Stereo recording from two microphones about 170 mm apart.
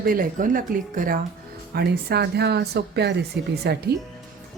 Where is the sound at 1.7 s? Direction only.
70° right (ahead or behind).